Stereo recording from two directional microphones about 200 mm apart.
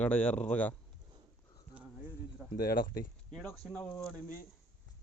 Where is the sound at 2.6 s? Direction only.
50° left (ahead or behind).